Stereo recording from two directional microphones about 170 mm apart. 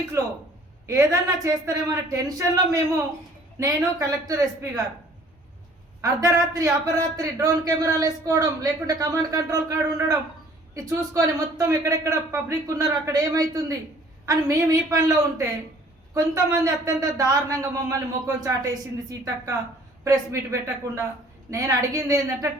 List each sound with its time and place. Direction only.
0.2 s a man's voice: 15° right (ahead or behind)
6.0 s a man's voice: 20° right (ahead or behind)